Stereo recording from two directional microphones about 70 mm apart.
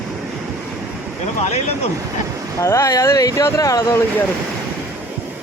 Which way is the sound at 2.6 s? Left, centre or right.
Left.